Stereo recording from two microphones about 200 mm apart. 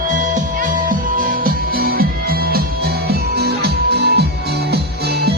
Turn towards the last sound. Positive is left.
turn(degrees=-55)  # may be behind; listen again after turning